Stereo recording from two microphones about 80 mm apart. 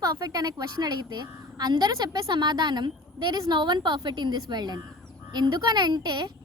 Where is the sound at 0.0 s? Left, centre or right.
Right.